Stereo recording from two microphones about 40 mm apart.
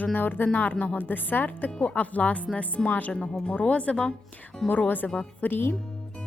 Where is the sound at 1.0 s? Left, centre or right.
Left.